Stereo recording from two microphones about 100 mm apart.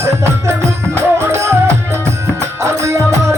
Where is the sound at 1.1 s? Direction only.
25° right (ahead or behind).